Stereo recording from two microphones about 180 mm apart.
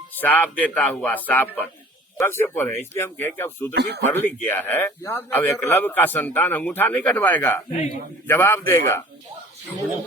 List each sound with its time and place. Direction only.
0.2 s speech: 10° left (ahead or behind)
3.8 s speech: 65° right (ahead or behind)
4.0 s speech: 10° left (ahead or behind)